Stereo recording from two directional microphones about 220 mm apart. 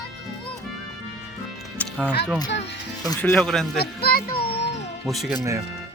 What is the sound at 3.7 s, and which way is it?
Speech, 45° left (ahead or behind).